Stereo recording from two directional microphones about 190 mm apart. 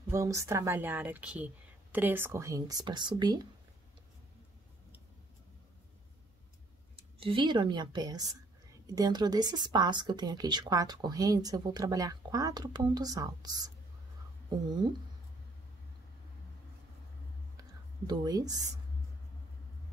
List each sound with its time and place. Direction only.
0.1 s speech: 15° right (ahead or behind)
7.0 s speech: 25° right (ahead or behind)
14.7 s speech: 25° right (ahead or behind)
18.0 s speech: 20° right (ahead or behind)